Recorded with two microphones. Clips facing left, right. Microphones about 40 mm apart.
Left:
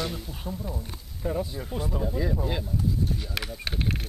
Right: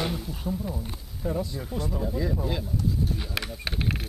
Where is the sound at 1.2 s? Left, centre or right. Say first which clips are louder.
Even; centre.